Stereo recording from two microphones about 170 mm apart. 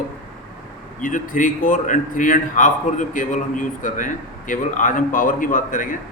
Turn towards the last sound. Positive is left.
turn(degrees=50)  # may be behind; listen again after turning